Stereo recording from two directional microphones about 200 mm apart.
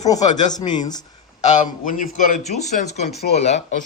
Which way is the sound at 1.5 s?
40° left (ahead or behind).